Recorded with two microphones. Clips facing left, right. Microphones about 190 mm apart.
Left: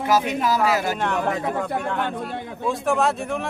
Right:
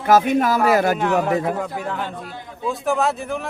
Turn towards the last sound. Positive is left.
turn(degrees=0)  # may be behind; listen again after turning